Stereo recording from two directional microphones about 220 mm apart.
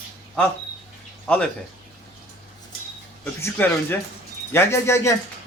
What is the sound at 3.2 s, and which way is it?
Speech, 10° left (ahead or behind).